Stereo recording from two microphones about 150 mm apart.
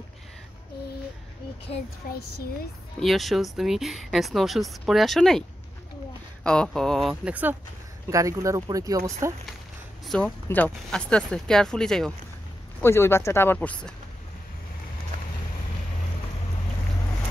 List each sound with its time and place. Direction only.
2.0 s speech: 90° left
3.0 s speech: centre (ahead or behind)
6.4 s speech: 5° left (ahead or behind)
8.1 s speech: 20° right (ahead or behind)
10.0 s speech: 5° left (ahead or behind)
12.8 s speech: 15° left (ahead or behind)